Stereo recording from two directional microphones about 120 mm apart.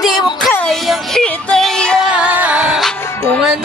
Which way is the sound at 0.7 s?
5° left (ahead or behind).